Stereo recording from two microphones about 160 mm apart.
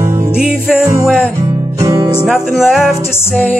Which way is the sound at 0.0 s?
15° right (ahead or behind).